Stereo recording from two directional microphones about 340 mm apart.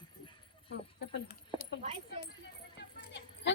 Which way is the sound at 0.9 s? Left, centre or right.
Left.